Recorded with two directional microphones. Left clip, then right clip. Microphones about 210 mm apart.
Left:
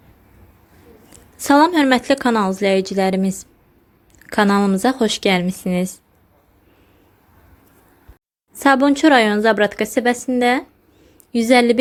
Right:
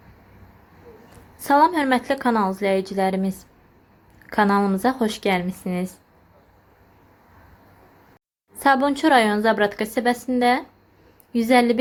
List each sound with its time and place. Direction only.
1.4 s speech: 40° left (ahead or behind)
8.5 s speech: 35° left (ahead or behind)